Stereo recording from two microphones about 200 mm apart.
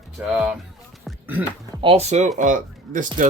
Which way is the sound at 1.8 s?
30° right (ahead or behind).